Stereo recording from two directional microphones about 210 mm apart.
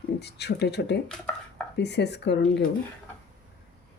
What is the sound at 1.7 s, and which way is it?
Speech, 55° left (ahead or behind).